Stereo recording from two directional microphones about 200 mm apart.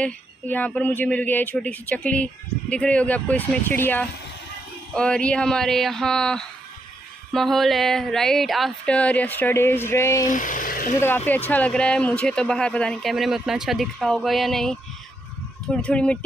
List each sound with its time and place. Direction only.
0.0 s speech: 5° left (ahead or behind)
10.2 s speech: 40° left (ahead or behind)
11.0 s speech: 10° left (ahead or behind)